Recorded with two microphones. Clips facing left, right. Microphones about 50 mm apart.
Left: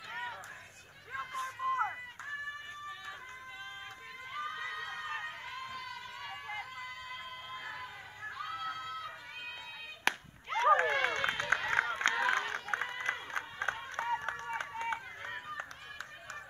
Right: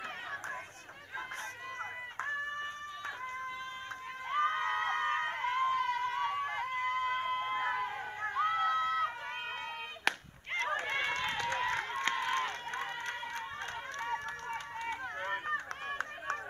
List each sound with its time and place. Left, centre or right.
1.6 s a sound: centre
4.3 s screaming: right
10.1 s chop: centre
10.7 s run: left
13.0 s run: left
15.2 s a sound: right
15.9 s run: right